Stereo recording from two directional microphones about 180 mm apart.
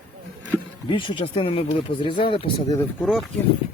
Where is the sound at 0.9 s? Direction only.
25° left (ahead or behind).